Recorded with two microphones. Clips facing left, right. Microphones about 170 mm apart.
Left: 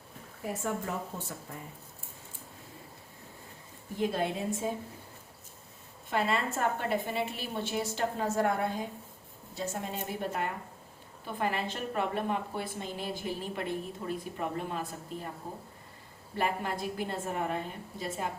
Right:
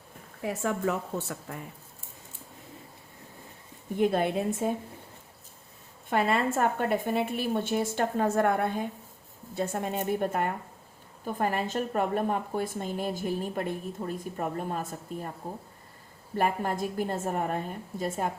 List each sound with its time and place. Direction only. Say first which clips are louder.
0.4 s speech: right 5 dB; 80° right
3.9 s a woman's voice: right 5 dB; 60° right (ahead or behind)
6.1 s a woman's voice: right 4 dB; 55° right (ahead or behind)
16.4 s a woman's voice: right 4 dB; 45° right (ahead or behind)